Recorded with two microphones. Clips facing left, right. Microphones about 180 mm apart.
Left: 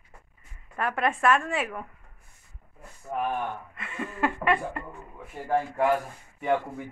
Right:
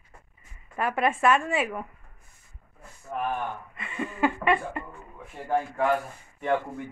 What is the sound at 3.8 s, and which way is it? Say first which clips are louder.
Speech: right 3 dB; centre (ahead or behind).